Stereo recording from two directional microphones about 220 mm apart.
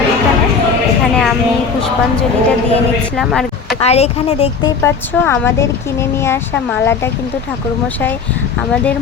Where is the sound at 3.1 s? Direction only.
Centre (ahead or behind).